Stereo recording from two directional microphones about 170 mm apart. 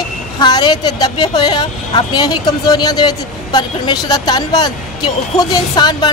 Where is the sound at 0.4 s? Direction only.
25° left (ahead or behind).